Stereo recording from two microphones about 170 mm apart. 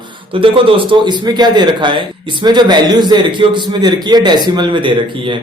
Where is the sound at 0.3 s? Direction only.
30° right (ahead or behind).